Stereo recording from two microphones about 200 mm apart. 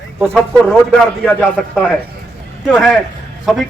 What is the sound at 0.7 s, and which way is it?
A man's voice, 5° left (ahead or behind).